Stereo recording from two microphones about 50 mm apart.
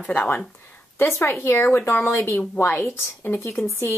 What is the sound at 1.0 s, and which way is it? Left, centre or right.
Speech, left.